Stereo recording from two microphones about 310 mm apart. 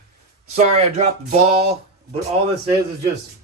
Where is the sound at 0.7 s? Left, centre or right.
Right.